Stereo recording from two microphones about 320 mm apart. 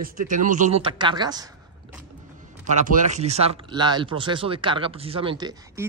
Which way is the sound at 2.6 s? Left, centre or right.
Right.